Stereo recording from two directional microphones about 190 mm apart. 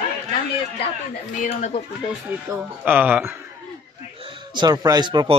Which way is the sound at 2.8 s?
10° right (ahead or behind).